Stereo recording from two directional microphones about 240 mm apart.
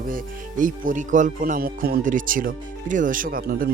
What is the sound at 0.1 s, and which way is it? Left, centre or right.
Speech, right.